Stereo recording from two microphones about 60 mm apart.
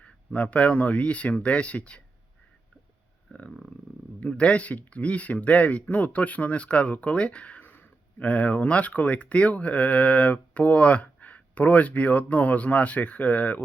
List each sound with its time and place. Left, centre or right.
0.0 s speech: left
4.2 s speech: centre